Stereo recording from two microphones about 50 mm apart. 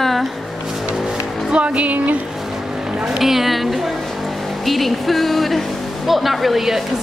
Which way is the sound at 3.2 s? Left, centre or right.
Centre.